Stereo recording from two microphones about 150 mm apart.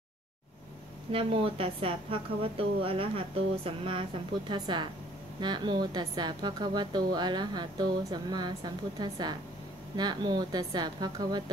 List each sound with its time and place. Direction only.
1.1 s a woman's voice: 40° right (ahead or behind)